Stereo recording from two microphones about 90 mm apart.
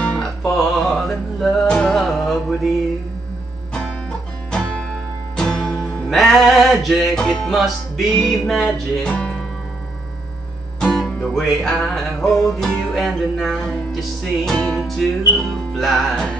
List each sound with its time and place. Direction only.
0.0 s music: 10° left (ahead or behind)
4.5 s music: 10° left (ahead or behind)
10.8 s music: 5° left (ahead or behind)